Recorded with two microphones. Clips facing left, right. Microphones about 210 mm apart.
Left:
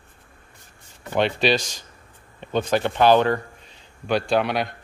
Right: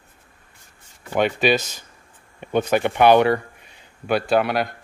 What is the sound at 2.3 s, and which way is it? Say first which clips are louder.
Speech: right 2 dB; 10° right (ahead or behind).